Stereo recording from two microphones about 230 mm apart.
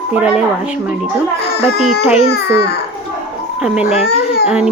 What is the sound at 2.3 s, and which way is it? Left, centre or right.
Speech, left.